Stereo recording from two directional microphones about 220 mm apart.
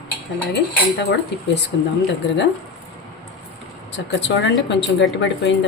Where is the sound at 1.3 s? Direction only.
50° left (ahead or behind).